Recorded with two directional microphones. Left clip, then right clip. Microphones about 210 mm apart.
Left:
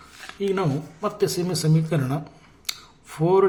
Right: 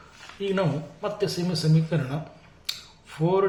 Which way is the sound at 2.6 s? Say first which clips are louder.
Left 1 dB; 35° left (ahead or behind).